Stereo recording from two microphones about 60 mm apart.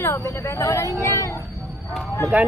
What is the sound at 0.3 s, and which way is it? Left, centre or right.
Speech, left.